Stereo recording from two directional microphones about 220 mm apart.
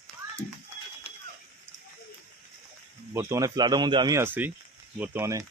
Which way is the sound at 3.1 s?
15° right (ahead or behind).